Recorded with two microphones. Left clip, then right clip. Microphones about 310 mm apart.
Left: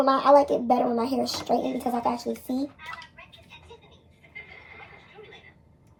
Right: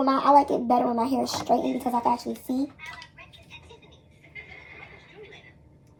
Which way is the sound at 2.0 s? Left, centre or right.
Centre.